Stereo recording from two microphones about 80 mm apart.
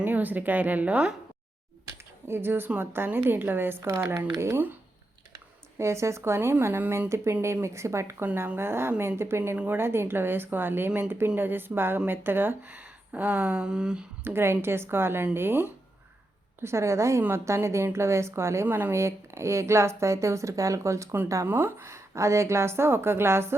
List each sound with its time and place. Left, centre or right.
0.0 s speech: right
2.2 s a woman's voice: right
5.8 s a woman's voice: right
7.4 s a woman's voice: right
8.2 s speech: right
8.5 s a woman's voice: right; by 14.0 s centre
14.3 s speech: right
16.6 s a woman's voice: right
21.4 s a woman's voice: right